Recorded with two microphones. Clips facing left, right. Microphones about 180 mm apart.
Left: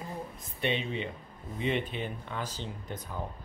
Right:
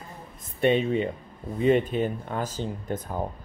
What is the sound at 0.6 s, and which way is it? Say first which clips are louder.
Speech: right 10 dB; 45° right (ahead or behind).